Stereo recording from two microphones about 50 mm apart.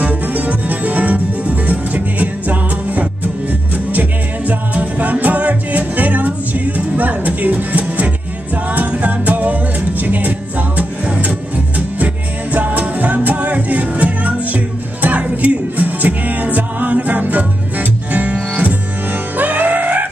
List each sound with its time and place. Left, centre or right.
0.0 s music: right